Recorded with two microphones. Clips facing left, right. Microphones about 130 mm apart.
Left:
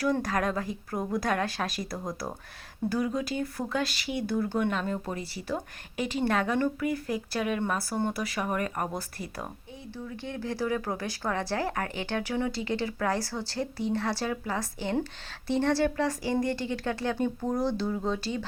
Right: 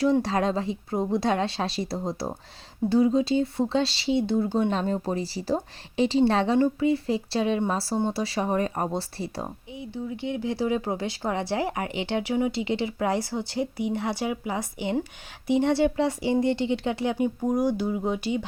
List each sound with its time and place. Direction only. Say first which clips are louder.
0.0 s speech: right 5 dB; 25° right (ahead or behind)